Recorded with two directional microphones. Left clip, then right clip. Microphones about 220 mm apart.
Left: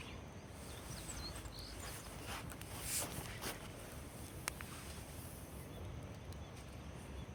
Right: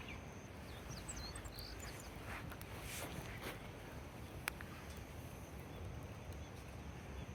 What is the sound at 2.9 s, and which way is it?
Boat, 40° left (ahead or behind).